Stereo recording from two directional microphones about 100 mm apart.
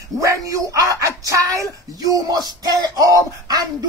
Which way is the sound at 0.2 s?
35° right (ahead or behind).